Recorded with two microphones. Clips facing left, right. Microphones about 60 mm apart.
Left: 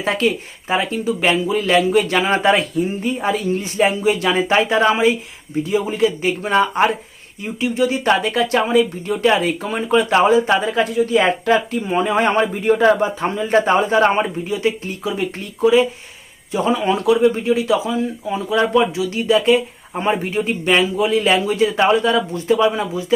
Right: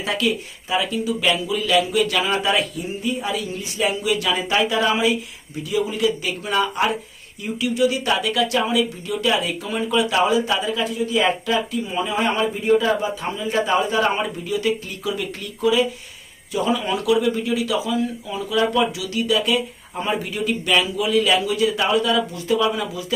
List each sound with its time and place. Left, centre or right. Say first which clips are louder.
0.0 s speech: left 4 dB; left
11.8 s speech: left 5 dB; left